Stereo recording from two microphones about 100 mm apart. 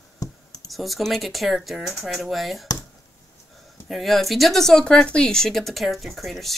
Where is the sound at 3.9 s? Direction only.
Centre (ahead or behind).